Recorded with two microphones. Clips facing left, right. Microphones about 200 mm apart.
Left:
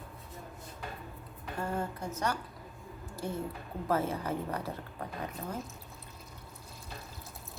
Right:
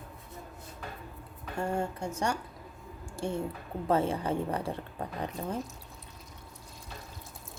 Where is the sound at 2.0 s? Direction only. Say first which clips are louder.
Right 2 dB; 30° right (ahead or behind).